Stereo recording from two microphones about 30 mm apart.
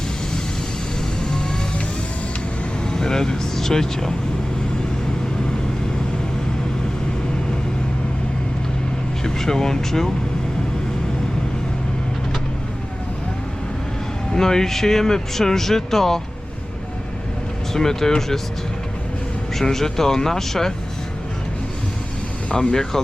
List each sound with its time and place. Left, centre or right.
2.8 s speech: left
9.2 s speech: centre
14.3 s speech: centre
17.7 s speech: centre
19.5 s speech: centre
22.7 s speech: centre